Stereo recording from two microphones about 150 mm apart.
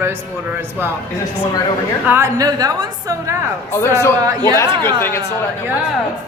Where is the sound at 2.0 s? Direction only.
15° right (ahead or behind).